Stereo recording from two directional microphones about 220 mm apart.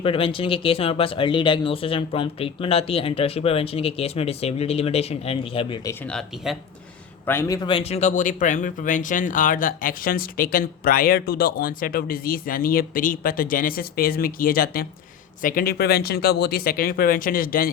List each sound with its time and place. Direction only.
0.0 s speech: 25° left (ahead or behind)
6.1 s speech: centre (ahead or behind)
7.3 s speech: 15° left (ahead or behind); by 17.7 s 40° left (ahead or behind)